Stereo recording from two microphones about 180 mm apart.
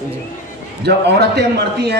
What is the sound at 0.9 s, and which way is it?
Speech, 65° right (ahead or behind).